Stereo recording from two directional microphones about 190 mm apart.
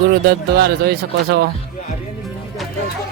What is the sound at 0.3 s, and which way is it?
Speech, 60° right (ahead or behind).